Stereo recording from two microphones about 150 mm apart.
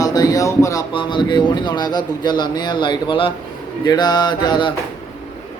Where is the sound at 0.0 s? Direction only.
25° left (ahead or behind).